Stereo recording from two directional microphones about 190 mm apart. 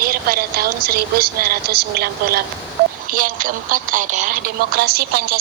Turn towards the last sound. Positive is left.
turn(degrees=-55)  # may be behind; listen again after turning